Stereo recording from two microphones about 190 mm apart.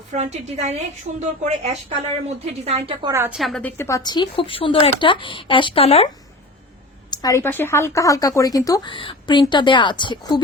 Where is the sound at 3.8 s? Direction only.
15° left (ahead or behind); by 6.1 s 30° left (ahead or behind).